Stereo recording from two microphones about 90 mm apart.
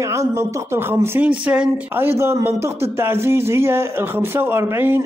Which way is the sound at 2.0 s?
25° right (ahead or behind).